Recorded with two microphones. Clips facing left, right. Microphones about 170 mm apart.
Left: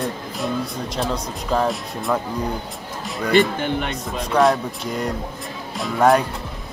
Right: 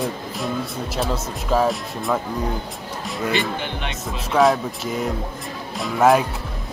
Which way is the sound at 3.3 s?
45° left (ahead or behind).